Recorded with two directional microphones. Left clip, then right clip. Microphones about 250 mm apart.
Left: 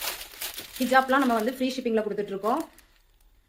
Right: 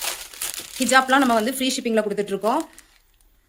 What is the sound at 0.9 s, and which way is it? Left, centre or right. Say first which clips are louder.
Speech: right 5 dB; right.